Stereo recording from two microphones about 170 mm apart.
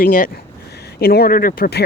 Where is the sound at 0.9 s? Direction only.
65° left (ahead or behind).